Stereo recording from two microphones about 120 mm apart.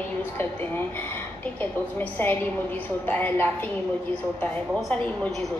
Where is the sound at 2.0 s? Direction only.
15° left (ahead or behind).